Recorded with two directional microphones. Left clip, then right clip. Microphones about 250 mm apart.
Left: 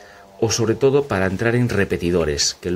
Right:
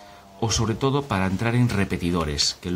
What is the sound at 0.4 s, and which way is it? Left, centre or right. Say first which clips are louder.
Speech: left 7 dB; centre.